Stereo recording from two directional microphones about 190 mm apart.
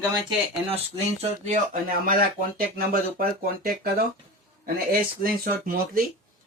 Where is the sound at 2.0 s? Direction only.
50° right (ahead or behind).